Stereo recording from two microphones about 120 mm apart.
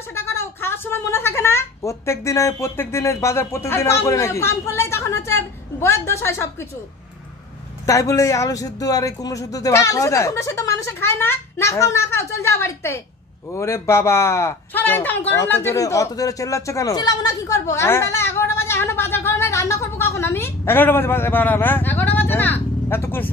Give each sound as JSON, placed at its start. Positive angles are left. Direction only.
{"t": 0.1, "sound": "a woman's voice", "side_deg": 20}
{"t": 7.8, "sound": "a man's voice", "side_deg": 25}